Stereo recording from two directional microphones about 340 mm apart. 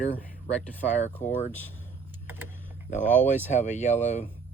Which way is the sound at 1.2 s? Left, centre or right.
Left.